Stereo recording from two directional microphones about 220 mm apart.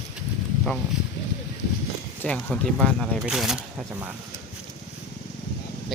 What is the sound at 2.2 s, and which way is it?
Speech, 5° left (ahead or behind).